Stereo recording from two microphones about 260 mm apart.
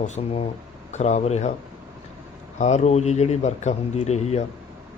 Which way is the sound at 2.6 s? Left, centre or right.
Left.